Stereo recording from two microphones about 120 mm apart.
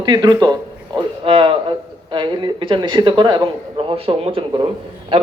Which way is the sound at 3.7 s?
50° right (ahead or behind).